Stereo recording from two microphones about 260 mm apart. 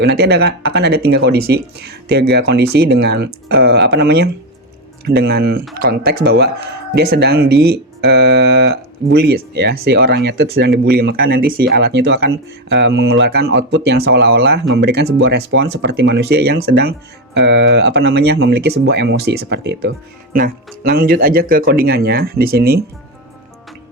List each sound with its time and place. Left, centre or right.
0.0 s speech: right